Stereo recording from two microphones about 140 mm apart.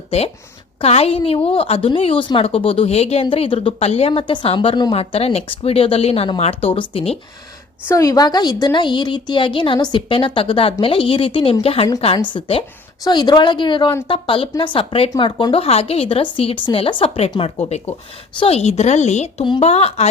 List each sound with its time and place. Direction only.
0.8 s a woman's voice: 45° left (ahead or behind)
7.9 s a woman's voice: 25° left (ahead or behind)
15.6 s a woman's voice: 45° left (ahead or behind)